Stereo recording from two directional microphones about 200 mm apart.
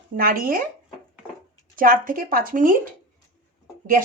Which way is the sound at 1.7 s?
45° right (ahead or behind).